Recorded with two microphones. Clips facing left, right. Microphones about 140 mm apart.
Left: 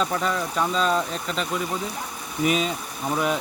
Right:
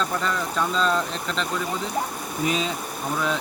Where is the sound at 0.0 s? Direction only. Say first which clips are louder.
Left 1 dB; 10° left (ahead or behind).